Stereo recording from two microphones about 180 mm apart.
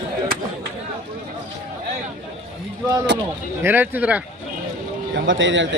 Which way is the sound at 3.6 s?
10° right (ahead or behind).